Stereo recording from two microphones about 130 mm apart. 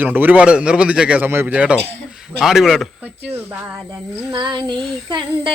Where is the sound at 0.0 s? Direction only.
15° right (ahead or behind).